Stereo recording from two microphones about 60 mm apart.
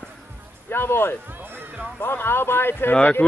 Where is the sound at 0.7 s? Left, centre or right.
Left.